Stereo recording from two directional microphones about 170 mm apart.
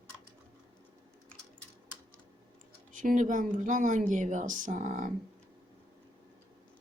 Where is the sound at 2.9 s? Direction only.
50° right (ahead or behind).